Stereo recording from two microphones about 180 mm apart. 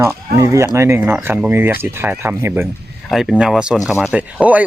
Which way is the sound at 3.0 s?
Centre (ahead or behind).